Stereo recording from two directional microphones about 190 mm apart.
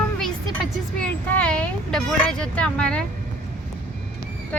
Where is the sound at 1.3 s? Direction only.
5° left (ahead or behind).